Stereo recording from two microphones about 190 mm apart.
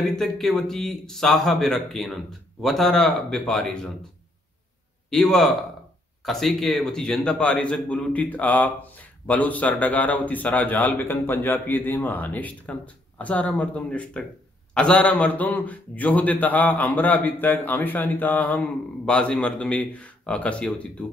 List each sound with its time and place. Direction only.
0.2 s speech: centre (ahead or behind)
5.1 s a man's voice: centre (ahead or behind)